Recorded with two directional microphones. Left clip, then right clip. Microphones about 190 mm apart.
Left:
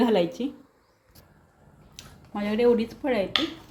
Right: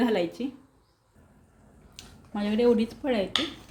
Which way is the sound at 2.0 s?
Centre (ahead or behind).